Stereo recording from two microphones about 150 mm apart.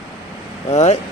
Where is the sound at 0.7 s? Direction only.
45° left (ahead or behind).